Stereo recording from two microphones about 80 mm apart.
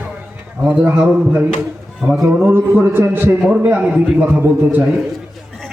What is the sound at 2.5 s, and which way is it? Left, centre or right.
Speech, right.